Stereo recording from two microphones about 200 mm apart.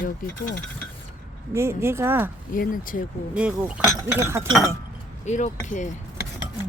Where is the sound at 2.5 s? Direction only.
45° left (ahead or behind).